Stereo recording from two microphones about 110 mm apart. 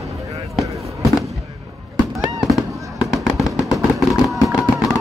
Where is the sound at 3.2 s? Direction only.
30° left (ahead or behind).